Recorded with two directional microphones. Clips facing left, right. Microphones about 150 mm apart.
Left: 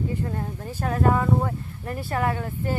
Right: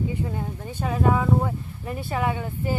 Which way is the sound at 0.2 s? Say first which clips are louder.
Even; 5° right (ahead or behind).